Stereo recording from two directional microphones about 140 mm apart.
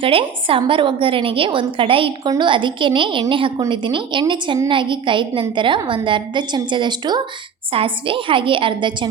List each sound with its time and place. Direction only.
0.0 s a woman's voice: 40° right (ahead or behind)